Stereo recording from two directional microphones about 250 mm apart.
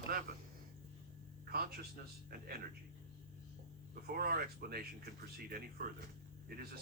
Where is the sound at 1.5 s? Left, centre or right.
Right.